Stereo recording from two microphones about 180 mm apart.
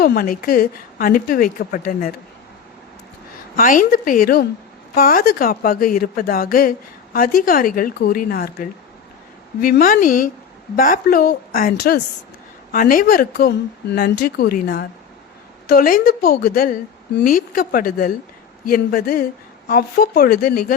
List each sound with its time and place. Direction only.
0.0 s a woman's voice: 55° left (ahead or behind)
3.6 s a woman's voice: 50° left (ahead or behind)
12.7 s a woman's voice: 50° left (ahead or behind)